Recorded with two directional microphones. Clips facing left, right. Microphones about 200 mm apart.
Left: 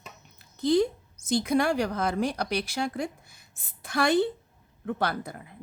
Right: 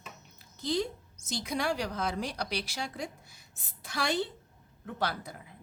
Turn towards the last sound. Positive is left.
turn(degrees=55)  # may be behind; listen again after turning